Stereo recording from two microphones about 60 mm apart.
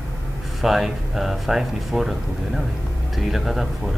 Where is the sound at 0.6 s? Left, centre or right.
Centre.